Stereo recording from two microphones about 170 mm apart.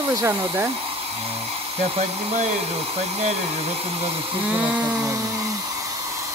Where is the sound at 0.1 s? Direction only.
15° right (ahead or behind).